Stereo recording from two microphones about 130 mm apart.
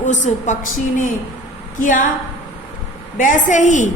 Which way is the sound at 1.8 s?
90° left.